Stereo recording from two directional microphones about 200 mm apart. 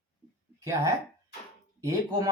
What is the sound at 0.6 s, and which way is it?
Speech, 15° right (ahead or behind).